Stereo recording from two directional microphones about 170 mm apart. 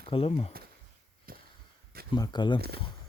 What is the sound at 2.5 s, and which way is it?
Speech, 65° right (ahead or behind).